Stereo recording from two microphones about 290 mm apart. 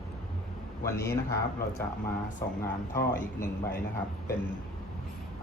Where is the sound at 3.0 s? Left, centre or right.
Left.